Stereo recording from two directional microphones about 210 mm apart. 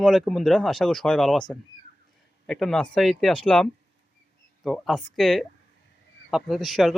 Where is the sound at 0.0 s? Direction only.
Centre (ahead or behind).